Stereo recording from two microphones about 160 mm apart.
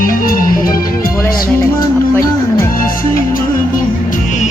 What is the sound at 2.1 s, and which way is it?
Music, 15° left (ahead or behind).